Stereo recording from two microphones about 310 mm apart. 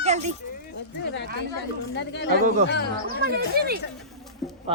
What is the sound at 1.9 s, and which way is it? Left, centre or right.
Speech, left.